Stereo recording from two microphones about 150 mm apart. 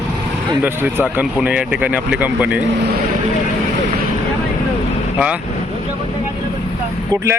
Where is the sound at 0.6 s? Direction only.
10° right (ahead or behind).